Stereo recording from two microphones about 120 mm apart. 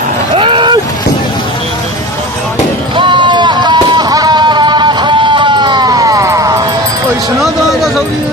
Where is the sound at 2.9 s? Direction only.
40° right (ahead or behind); by 6.6 s 25° right (ahead or behind).